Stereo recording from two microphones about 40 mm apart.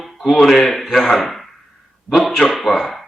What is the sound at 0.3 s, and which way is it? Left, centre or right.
Speech, centre.